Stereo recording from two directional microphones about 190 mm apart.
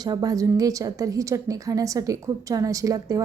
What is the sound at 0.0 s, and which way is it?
Speech, 20° right (ahead or behind).